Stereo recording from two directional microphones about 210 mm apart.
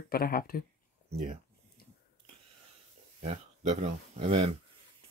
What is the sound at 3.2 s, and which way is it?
Speech, 30° right (ahead or behind).